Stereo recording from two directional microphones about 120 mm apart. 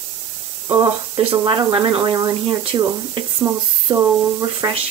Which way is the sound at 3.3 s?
25° right (ahead or behind).